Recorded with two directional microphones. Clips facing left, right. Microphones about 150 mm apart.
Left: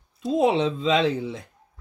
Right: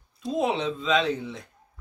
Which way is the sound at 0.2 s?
30° left (ahead or behind).